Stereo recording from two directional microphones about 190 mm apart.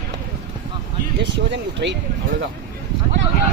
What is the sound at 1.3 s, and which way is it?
Speech, 65° right (ahead or behind).